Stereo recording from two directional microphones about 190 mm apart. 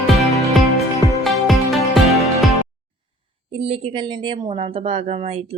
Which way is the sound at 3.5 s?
30° right (ahead or behind).